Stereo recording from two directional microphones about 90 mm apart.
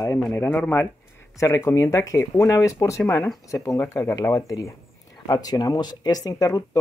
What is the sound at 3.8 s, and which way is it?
Speech, 30° left (ahead or behind).